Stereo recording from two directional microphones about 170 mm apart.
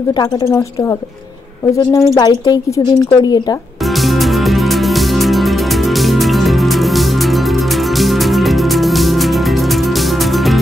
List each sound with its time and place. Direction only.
1.8 s speech: 20° left (ahead or behind)
5.2 s music: centre (ahead or behind)
8.0 s music: centre (ahead or behind)